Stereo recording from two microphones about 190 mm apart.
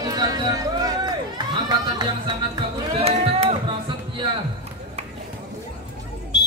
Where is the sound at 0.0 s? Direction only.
20° right (ahead or behind).